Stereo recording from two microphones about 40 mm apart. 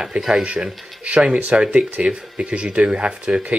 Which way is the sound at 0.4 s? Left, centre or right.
Right.